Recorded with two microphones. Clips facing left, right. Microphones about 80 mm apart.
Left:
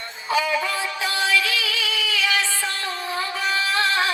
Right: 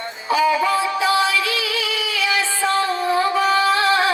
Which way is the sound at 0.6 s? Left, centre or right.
Right.